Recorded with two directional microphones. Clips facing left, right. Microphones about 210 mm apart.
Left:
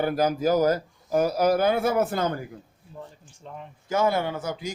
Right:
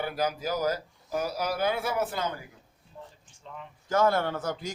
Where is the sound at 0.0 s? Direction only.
45° left (ahead or behind).